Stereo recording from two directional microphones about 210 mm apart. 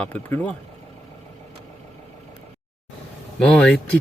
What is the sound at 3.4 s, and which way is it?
Speech, 5° left (ahead or behind).